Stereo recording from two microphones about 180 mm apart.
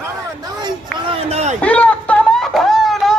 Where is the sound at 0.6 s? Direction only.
30° right (ahead or behind).